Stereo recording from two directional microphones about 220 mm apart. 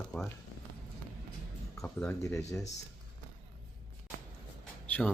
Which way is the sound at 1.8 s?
10° left (ahead or behind).